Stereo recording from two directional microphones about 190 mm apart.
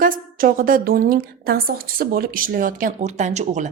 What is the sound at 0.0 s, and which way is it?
A woman's voice, 45° right (ahead or behind).